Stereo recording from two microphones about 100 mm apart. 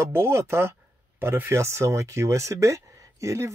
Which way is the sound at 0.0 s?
25° right (ahead or behind).